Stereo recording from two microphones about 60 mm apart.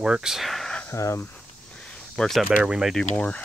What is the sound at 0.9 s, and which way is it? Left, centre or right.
Speech, left.